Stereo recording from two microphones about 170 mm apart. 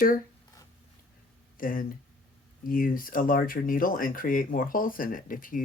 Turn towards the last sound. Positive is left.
turn(degrees=55)  # may be behind; listen again after turning